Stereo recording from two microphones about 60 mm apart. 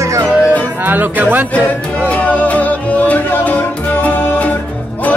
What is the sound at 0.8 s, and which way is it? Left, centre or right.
Speech, right.